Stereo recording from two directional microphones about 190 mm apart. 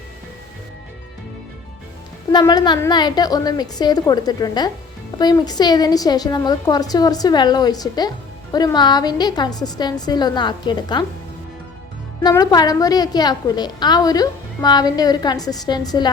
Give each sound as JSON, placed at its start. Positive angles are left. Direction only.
{"t": 2.3, "sound": "a woman's voice", "side_deg": 20}
{"t": 12.2, "sound": "a woman's voice", "side_deg": 20}